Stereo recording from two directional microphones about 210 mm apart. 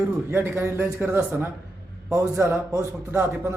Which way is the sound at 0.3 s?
10° right (ahead or behind).